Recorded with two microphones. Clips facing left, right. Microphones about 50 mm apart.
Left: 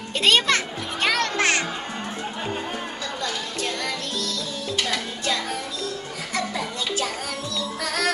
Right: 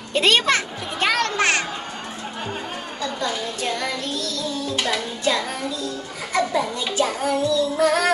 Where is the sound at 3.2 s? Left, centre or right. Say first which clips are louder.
Right 3 dB; centre.